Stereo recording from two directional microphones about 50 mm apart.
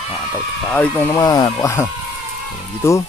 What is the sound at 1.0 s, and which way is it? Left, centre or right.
Speech, left.